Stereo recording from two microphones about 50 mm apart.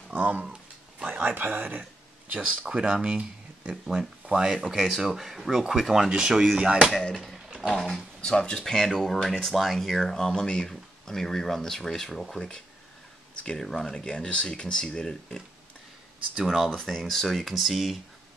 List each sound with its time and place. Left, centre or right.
0.1 s a sound: right
1.0 s speech: right
1.8 s speech: right
3.7 s speech: centre
7.3 s a sound: centre
7.6 s speech: centre
12.4 s speech: centre
13.6 s speech: centre
16.9 s speech: centre